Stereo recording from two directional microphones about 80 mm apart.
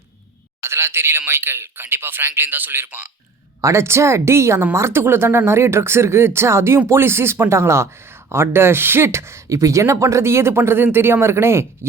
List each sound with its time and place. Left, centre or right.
0.6 s a man's voice: right
3.6 s speech: right